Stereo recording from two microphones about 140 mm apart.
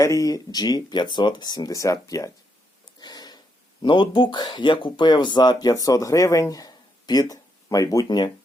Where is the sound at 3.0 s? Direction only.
30° left (ahead or behind).